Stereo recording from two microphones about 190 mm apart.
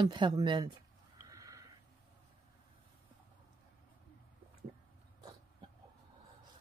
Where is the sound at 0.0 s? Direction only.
25° right (ahead or behind).